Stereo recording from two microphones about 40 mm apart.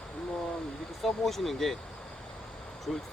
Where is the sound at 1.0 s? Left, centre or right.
Centre.